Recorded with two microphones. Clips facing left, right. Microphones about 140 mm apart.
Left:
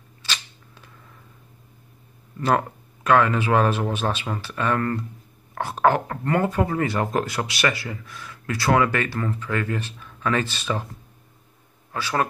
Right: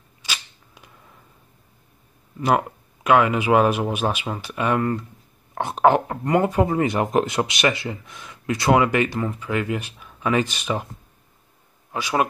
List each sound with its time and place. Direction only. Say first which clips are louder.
0.2 s a sound: even; 15° right (ahead or behind)
2.3 s speech: right 1 dB; 15° right (ahead or behind)
11.9 s speech: right 2 dB; 15° right (ahead or behind)